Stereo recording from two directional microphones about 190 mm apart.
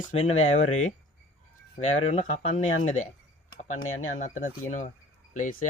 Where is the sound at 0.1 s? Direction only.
35° left (ahead or behind).